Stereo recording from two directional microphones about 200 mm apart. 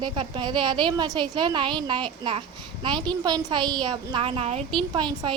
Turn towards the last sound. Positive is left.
turn(degrees=-20)  # may be behind; listen again after turning